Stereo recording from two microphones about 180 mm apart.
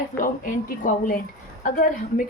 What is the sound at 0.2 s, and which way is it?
A woman's voice, 45° left (ahead or behind).